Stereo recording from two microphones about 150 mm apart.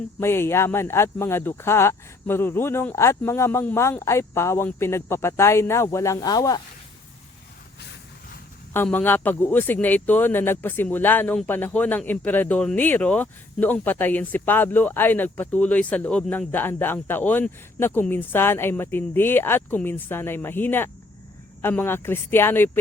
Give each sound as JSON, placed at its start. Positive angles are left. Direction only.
{"t": 0.2, "sound": "speech", "side_deg": 15}
{"t": 8.7, "sound": "speech", "side_deg": 10}